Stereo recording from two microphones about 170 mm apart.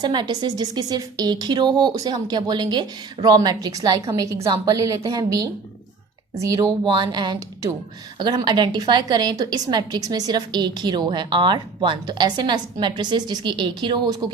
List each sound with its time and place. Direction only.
0.0 s a woman's voice: 25° right (ahead or behind)